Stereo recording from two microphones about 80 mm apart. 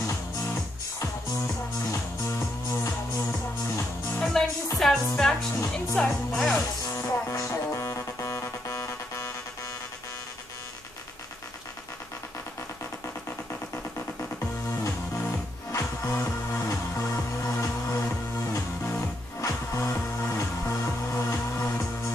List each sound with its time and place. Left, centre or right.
1.9 s music: left
4.2 s music: centre
5.7 s speech: centre
6.5 s music: left
15.7 s music: left